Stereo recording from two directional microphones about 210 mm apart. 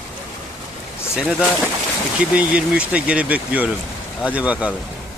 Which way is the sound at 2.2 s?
5° right (ahead or behind).